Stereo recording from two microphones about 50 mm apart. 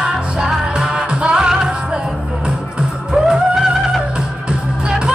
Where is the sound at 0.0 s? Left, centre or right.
Centre.